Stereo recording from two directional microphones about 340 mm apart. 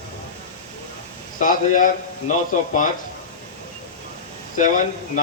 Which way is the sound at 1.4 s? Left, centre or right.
Left.